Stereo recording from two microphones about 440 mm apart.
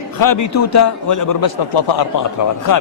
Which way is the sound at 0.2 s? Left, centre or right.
Left.